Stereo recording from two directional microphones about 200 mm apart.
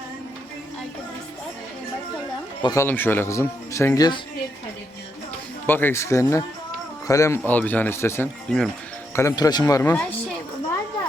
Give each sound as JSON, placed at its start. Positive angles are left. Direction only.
{"t": 2.6, "sound": "speech", "side_deg": 15}
{"t": 5.6, "sound": "speech", "side_deg": 10}
{"t": 9.1, "sound": "speech", "side_deg": 15}